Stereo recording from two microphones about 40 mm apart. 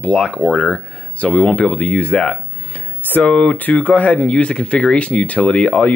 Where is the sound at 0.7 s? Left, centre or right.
Left.